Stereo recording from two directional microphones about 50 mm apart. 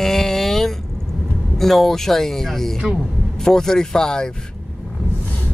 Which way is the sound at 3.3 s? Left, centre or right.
Centre.